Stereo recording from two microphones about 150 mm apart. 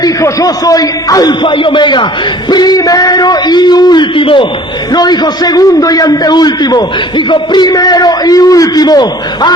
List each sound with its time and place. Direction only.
0.0 s a man's voice: 25° left (ahead or behind)